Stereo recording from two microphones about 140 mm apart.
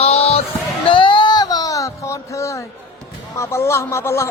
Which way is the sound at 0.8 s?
40° left (ahead or behind).